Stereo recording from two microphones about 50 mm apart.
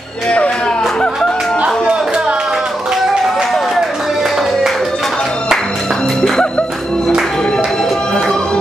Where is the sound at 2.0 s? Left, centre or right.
Centre.